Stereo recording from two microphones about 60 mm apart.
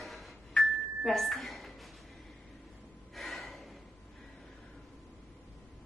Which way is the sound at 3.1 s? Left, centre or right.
Centre.